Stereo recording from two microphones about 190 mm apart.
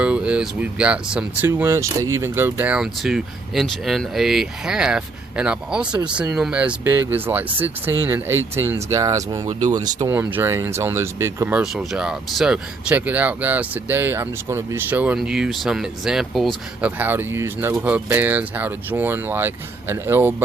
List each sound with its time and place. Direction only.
0.0 s speech: 5° right (ahead or behind)
10.2 s speech: 10° right (ahead or behind)